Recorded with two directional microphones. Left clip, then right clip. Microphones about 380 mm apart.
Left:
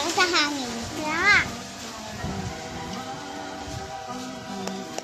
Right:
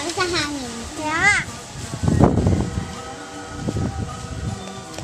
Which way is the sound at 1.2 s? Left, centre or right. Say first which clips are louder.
Right 2 dB; right.